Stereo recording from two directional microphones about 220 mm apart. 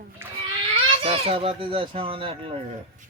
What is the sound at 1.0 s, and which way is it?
Speech, 25° right (ahead or behind).